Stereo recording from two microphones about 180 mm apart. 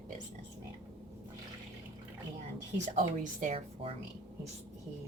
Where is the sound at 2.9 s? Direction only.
45° right (ahead or behind).